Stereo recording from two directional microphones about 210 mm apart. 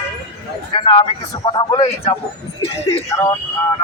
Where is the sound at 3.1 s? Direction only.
15° left (ahead or behind).